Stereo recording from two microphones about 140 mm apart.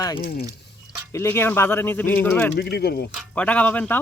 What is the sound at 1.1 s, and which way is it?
Speech, 20° left (ahead or behind).